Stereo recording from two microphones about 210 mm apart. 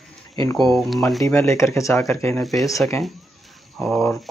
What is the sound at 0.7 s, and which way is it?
Speech, centre (ahead or behind).